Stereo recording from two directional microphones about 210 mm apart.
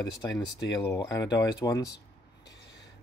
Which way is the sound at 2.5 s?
55° left (ahead or behind).